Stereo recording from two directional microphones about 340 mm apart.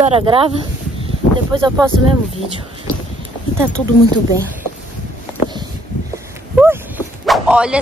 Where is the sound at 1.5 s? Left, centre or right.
Centre.